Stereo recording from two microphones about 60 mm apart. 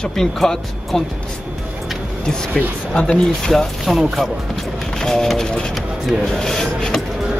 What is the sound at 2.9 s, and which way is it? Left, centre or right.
Speech, centre.